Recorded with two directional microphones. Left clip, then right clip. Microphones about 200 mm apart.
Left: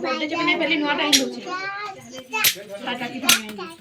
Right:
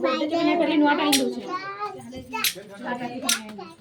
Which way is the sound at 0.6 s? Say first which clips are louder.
Right 1 dB; 50° right (ahead or behind).